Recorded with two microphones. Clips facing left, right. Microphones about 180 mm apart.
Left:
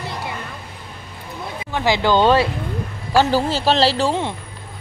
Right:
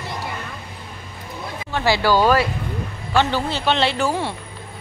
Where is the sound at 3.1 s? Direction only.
40° left (ahead or behind).